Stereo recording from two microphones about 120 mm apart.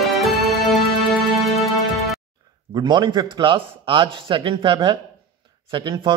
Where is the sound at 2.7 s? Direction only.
40° right (ahead or behind).